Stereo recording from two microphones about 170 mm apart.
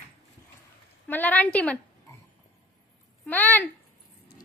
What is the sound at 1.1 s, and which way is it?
Speech, 10° left (ahead or behind).